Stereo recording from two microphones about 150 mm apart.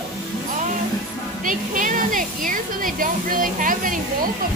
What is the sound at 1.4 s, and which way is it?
Speech, 60° right (ahead or behind).